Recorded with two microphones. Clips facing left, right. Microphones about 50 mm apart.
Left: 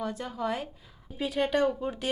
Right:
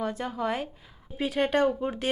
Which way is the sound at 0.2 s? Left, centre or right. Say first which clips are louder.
Right 2 dB; centre.